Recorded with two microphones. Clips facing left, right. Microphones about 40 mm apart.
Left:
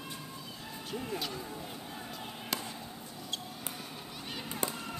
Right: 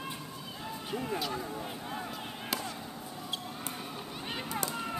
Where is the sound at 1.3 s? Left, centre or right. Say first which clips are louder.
Right 4 dB; right.